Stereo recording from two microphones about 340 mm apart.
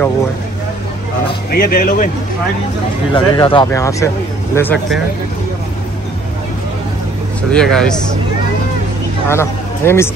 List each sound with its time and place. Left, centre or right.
1.5 s speech: left
3.1 s speech: centre
7.5 s speech: centre
9.3 s speech: centre